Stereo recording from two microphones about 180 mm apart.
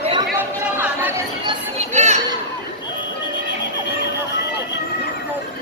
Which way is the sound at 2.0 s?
40° right (ahead or behind).